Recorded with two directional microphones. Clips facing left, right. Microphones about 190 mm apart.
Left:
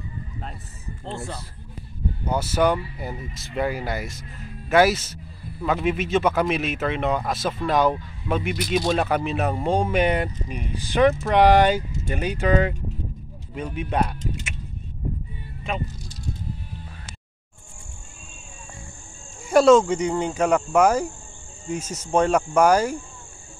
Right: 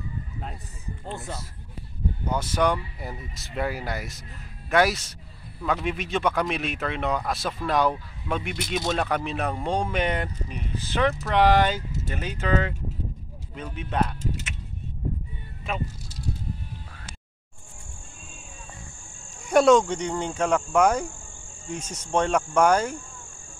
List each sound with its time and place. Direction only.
2.2 s speech: 10° left (ahead or behind)
19.5 s speech: centre (ahead or behind)